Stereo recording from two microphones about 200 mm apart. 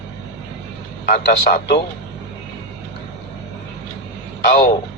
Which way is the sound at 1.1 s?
50° left (ahead or behind).